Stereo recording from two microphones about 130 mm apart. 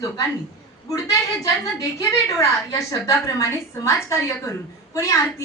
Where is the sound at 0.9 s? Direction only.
25° left (ahead or behind).